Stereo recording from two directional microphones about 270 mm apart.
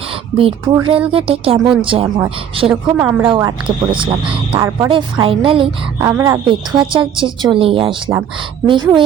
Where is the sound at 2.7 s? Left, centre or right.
Centre.